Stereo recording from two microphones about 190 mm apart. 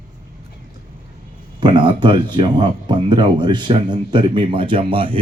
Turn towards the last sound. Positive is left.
turn(degrees=-25)  # may be behind; listen again after turning